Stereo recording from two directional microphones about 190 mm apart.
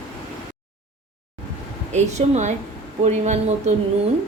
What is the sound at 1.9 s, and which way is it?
A woman's voice, 35° right (ahead or behind).